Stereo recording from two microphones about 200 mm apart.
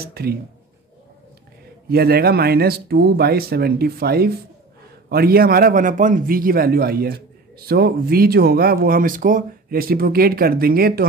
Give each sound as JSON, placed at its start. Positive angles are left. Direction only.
{"t": 0.0, "sound": "a man's voice", "side_deg": -50}
{"t": 1.9, "sound": "a man's voice", "side_deg": -50}